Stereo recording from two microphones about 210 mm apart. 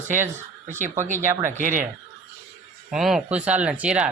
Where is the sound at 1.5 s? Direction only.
40° right (ahead or behind).